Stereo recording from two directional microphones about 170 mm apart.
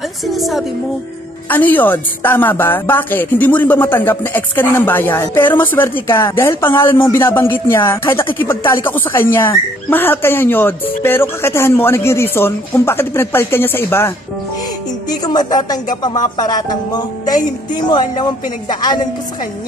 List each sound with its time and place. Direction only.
0.3 s a woman's voice: centre (ahead or behind)
1.5 s speech: 10° left (ahead or behind)